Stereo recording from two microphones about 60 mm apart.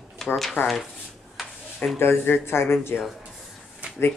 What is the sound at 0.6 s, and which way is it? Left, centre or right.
Speech, left.